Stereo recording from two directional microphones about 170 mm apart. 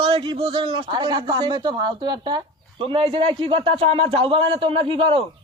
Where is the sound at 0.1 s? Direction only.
30° right (ahead or behind).